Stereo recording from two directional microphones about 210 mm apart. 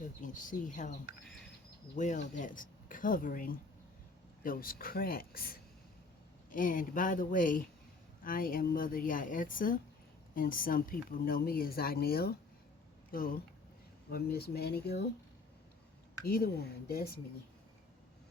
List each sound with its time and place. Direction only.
0.2 s speech: 40° left (ahead or behind)
2.0 s speech: 35° left (ahead or behind)
16.2 s speech: 45° left (ahead or behind)